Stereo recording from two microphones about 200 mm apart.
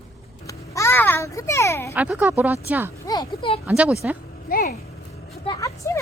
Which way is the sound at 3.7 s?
5° right (ahead or behind).